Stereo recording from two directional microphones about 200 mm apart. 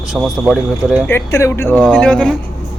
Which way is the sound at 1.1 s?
15° left (ahead or behind).